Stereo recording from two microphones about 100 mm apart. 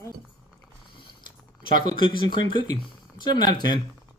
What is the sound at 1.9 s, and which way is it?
Speech, 55° left (ahead or behind).